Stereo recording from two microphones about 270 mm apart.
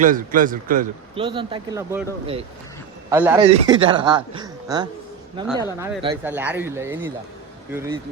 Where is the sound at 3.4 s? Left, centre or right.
Right.